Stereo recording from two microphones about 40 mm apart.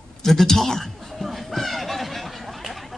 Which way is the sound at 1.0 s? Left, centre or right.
Centre.